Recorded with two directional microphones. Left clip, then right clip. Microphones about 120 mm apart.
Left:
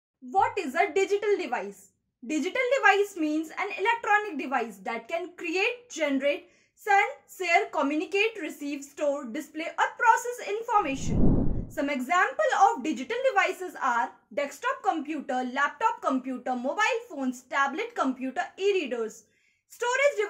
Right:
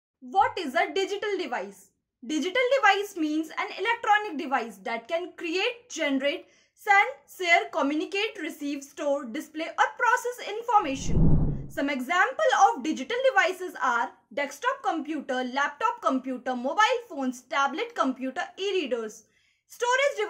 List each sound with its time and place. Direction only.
0.3 s a woman's voice: 20° right (ahead or behind)
7.3 s a woman's voice: 20° right (ahead or behind)